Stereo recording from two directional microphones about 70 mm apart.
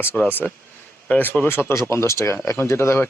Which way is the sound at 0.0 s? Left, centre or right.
Left.